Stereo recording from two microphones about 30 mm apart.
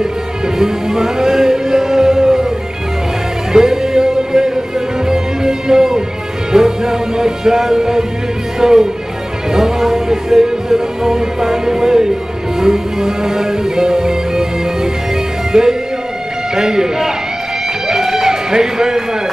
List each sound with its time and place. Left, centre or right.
0.6 s music: centre
3.5 s music: centre
8.5 s speech: centre
9.5 s music: centre
15.5 s speech: right
17.8 s music: centre